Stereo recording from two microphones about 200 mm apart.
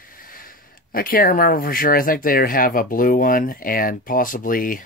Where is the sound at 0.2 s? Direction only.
45° left (ahead or behind).